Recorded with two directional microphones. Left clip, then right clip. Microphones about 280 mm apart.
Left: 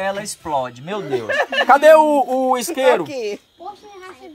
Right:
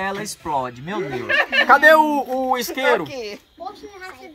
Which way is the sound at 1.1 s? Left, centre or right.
Left.